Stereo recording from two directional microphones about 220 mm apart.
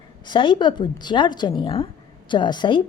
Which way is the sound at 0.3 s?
20° left (ahead or behind).